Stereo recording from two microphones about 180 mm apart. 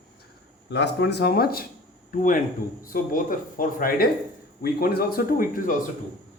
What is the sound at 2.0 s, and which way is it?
Speech, 45° left (ahead or behind).